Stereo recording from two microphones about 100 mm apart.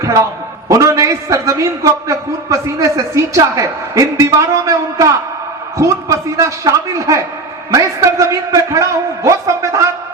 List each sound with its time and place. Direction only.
0.0 s a man's voice: 30° right (ahead or behind)